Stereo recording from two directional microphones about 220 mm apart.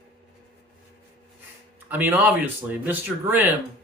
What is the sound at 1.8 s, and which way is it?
Speech, 10° right (ahead or behind).